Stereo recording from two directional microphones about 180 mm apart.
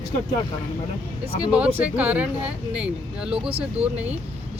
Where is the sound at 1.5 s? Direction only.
5° right (ahead or behind).